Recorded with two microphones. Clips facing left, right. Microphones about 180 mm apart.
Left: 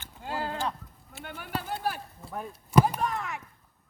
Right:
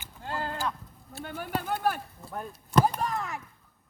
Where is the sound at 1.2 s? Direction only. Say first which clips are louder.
Right 3 dB; 45° right (ahead or behind).